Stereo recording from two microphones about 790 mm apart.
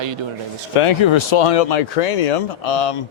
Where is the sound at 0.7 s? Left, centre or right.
Left.